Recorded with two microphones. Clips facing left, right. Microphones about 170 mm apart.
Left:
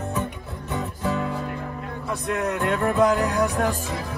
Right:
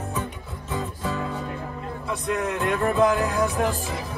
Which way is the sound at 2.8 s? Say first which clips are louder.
Left 1 dB; centre (ahead or behind).